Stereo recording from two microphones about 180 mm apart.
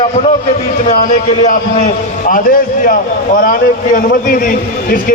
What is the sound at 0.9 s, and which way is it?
A man's voice, 40° left (ahead or behind).